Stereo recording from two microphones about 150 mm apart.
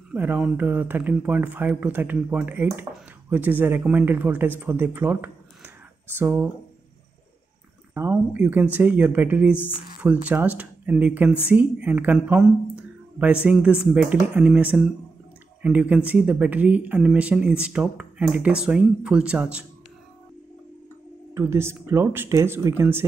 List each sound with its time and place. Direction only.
0.1 s speech: 10° right (ahead or behind)
7.9 s speech: 15° right (ahead or behind)
21.4 s speech: 15° right (ahead or behind)